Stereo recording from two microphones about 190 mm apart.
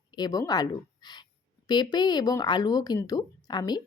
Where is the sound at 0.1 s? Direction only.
20° left (ahead or behind).